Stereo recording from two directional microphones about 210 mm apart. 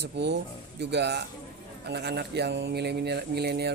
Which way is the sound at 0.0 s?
55° right (ahead or behind).